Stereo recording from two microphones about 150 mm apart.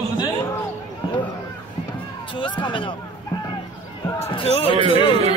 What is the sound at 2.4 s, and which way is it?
Speech, 35° left (ahead or behind).